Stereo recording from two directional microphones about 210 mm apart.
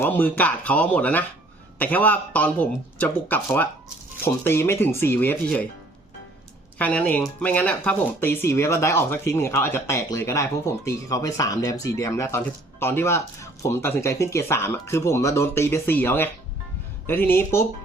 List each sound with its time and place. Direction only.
0.0 s speech: 10° left (ahead or behind)
6.7 s speech: 5° left (ahead or behind)